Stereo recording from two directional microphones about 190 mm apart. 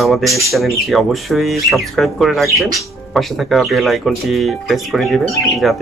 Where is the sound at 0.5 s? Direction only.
Centre (ahead or behind).